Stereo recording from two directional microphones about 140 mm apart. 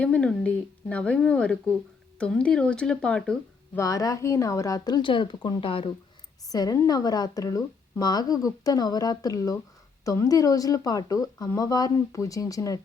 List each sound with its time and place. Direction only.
0.0 s speech: 5° left (ahead or behind)
3.8 s a woman's voice: 25° left (ahead or behind)
6.5 s a woman's voice: 25° left (ahead or behind)